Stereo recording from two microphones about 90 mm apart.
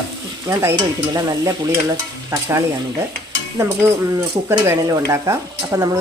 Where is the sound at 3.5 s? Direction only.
30° right (ahead or behind).